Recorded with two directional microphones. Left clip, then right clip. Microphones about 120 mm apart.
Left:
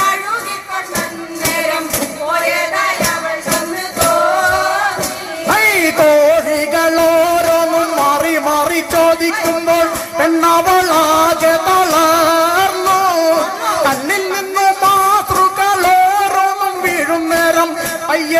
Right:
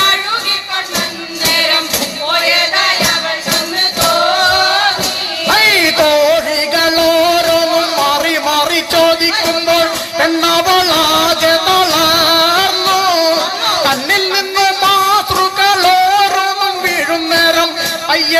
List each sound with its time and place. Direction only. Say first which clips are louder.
1.5 s music: right 4 dB; 45° left (ahead or behind)